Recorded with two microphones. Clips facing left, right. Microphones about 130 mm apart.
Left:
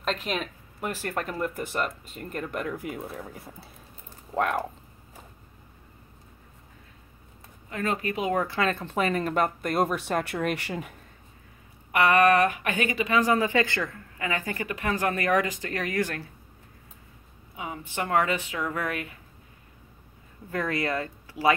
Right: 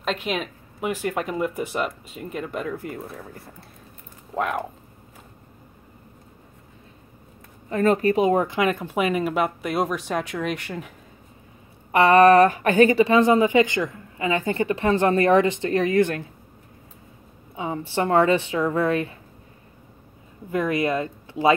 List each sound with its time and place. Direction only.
0.0 s a woman's voice: centre (ahead or behind)
7.7 s speech: 35° right (ahead or behind); by 10.6 s 5° left (ahead or behind)
11.9 s speech: 30° right (ahead or behind)
17.6 s speech: 30° right (ahead or behind)
20.5 s speech: 20° right (ahead or behind)